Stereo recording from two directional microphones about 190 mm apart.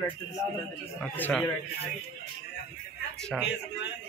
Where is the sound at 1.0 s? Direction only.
10° left (ahead or behind).